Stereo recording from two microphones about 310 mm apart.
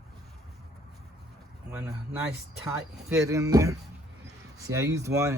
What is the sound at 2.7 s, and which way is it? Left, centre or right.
Speech, centre.